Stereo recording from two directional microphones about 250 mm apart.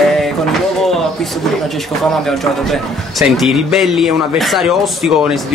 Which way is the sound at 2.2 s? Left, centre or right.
Centre.